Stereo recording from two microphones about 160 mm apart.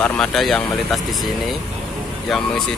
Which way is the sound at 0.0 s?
5° left (ahead or behind).